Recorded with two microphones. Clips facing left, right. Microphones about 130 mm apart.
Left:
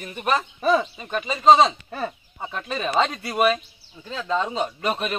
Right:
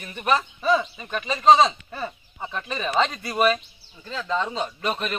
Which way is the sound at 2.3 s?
5° left (ahead or behind).